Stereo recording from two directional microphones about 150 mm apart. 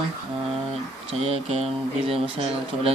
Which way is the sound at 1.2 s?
45° right (ahead or behind).